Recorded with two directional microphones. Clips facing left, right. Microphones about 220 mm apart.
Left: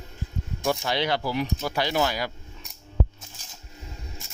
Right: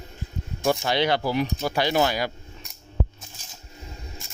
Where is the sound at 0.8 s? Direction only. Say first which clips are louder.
Right 3 dB; 65° right (ahead or behind).